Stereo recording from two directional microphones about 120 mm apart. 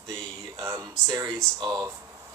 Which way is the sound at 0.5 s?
25° right (ahead or behind).